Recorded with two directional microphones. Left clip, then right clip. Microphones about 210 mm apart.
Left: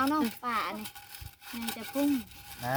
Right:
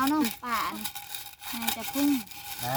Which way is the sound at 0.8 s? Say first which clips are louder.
Right 6 dB; 50° right (ahead or behind).